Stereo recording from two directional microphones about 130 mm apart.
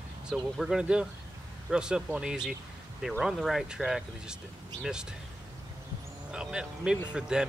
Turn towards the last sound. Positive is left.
turn(degrees=-5)  # may be behind; listen again after turning